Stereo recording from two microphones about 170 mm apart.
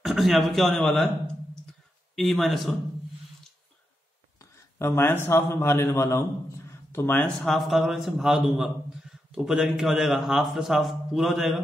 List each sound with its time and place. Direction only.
0.0 s a man's voice: centre (ahead or behind)
4.4 s a man's voice: 15° left (ahead or behind)
6.7 s a sound: 15° left (ahead or behind)
7.3 s a man's voice: centre (ahead or behind)